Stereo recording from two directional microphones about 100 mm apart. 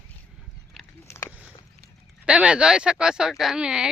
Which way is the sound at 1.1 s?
25° left (ahead or behind).